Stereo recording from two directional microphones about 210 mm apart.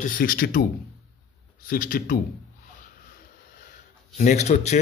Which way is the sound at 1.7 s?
40° left (ahead or behind).